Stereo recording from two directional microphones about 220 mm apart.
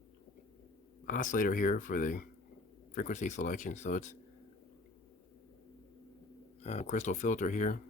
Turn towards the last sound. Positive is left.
turn(degrees=35)  # may be behind; listen again after turning